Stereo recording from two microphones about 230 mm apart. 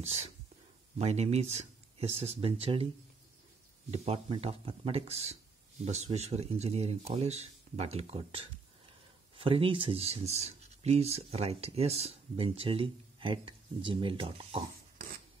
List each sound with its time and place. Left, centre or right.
0.0 s speech: right
3.9 s speech: right